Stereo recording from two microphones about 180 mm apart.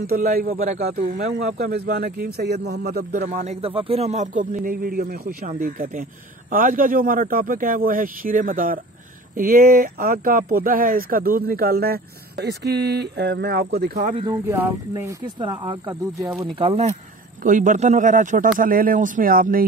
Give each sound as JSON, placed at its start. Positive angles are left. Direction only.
{"t": 0.0, "sound": "a man's voice", "side_deg": -55}
{"t": 1.0, "sound": "speech", "side_deg": -55}
{"t": 3.2, "sound": "a man's voice", "side_deg": -40}
{"t": 14.1, "sound": "speech", "side_deg": -20}
{"t": 15.4, "sound": "speech", "side_deg": -25}
{"t": 15.9, "sound": "speech", "side_deg": -15}
{"t": 16.5, "sound": "speech", "side_deg": -35}
{"t": 17.4, "sound": "a man's voice", "side_deg": -45}